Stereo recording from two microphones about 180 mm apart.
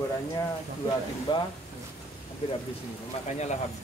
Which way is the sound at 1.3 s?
25° left (ahead or behind).